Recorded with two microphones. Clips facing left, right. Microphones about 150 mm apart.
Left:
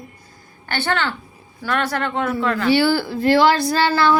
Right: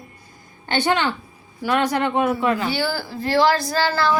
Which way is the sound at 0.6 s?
15° right (ahead or behind).